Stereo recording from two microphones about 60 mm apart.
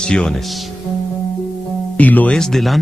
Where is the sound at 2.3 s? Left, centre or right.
Centre.